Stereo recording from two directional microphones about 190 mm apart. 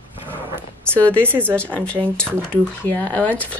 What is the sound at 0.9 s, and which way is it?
Speech, 5° left (ahead or behind).